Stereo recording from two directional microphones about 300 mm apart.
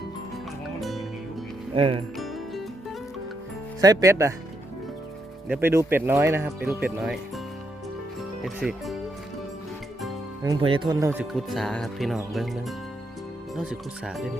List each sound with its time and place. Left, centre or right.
0.8 s music: centre
1.7 s speech: centre
2.1 s music: centre
3.8 s speech: centre
5.5 s speech: centre
8.4 s speech: centre
10.4 s speech: centre